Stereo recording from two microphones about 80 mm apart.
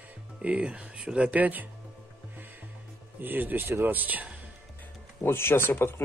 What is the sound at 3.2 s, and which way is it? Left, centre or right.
Speech, right.